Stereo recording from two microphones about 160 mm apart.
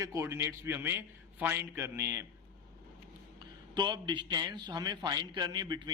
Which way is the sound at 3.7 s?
25° right (ahead or behind).